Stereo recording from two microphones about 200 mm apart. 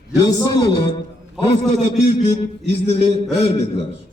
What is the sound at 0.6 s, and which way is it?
Speech, 25° left (ahead or behind).